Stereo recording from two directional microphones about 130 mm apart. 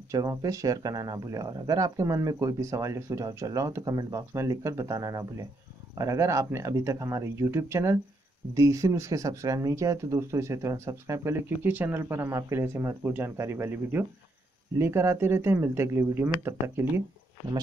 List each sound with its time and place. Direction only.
0.1 s speech: 25° right (ahead or behind)